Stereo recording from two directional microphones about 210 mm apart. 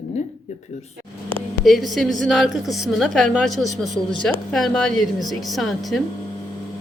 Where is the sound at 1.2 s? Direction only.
5° left (ahead or behind).